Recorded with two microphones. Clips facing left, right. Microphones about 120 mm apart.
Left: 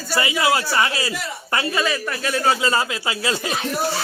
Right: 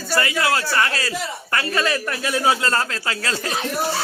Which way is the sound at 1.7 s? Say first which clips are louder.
Right 1 dB; centre (ahead or behind).